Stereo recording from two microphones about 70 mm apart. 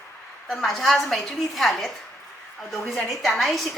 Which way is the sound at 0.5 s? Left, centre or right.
Centre.